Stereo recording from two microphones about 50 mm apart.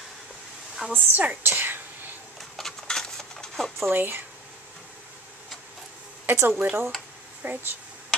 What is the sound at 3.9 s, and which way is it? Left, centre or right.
Speech, right.